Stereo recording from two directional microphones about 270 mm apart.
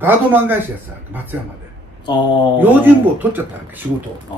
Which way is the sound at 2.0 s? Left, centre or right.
Centre.